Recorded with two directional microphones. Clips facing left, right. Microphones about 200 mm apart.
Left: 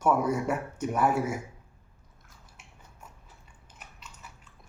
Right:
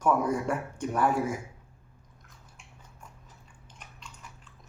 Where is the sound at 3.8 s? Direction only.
5° left (ahead or behind).